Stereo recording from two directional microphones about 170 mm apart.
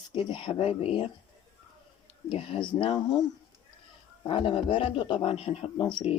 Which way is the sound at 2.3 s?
30° left (ahead or behind).